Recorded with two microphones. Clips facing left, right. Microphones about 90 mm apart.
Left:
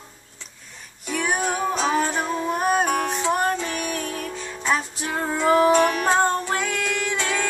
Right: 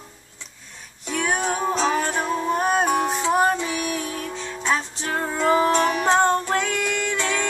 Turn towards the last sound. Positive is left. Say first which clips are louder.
# even
turn(degrees=5)  # may be behind; listen again after turning